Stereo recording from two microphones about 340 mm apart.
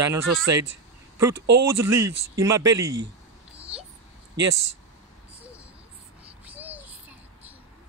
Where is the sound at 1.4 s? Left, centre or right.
Right.